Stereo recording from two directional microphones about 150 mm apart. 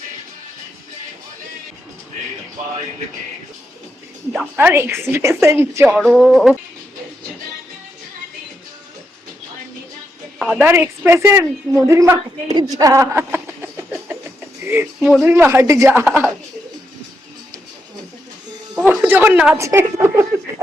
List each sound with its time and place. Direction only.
4.5 s a woman's voice: 15° right (ahead or behind)
6.0 s speech: centre (ahead or behind)
10.5 s a woman's voice: 10° right (ahead or behind)
12.7 s a sound: 20° right (ahead or behind)
14.9 s speech: centre (ahead or behind)
15.2 s a woman's voice: 15° right (ahead or behind)
18.7 s a woman's voice: 10° right (ahead or behind)